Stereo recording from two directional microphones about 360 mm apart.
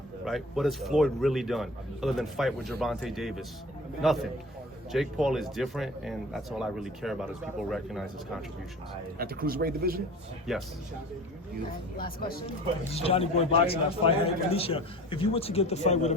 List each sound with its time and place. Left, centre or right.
0.3 s a man's voice: centre
9.1 s speech: right
10.5 s a man's voice: centre
11.9 s a man's voice: left